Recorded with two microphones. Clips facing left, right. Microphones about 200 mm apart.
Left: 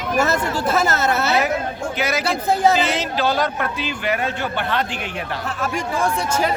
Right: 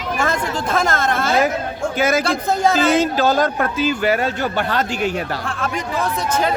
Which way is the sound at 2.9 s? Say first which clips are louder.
Right 5 dB; 45° right (ahead or behind).